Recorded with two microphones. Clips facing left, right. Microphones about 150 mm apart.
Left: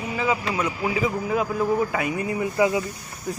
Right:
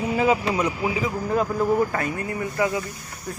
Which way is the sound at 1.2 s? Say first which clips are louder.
Right 1 dB; 5° left (ahead or behind).